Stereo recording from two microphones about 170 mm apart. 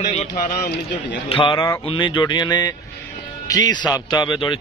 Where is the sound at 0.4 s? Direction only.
60° left (ahead or behind).